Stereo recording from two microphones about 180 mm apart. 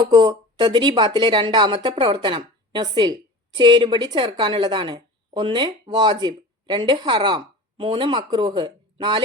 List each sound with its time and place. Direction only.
0.1 s speech: 25° right (ahead or behind)